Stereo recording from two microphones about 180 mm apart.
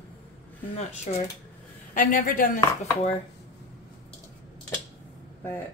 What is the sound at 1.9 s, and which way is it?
Speech, 50° left (ahead or behind).